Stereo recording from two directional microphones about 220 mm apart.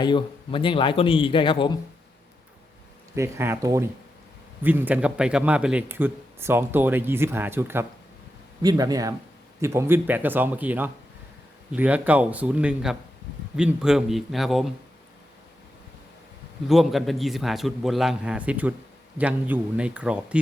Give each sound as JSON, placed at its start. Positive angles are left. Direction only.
{"t": 0.0, "sound": "speech", "side_deg": 20}
{"t": 3.2, "sound": "a man's voice", "side_deg": -10}
{"t": 16.6, "sound": "a man's voice", "side_deg": 0}